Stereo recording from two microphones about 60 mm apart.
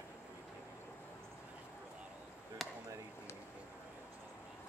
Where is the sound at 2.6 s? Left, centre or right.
Centre.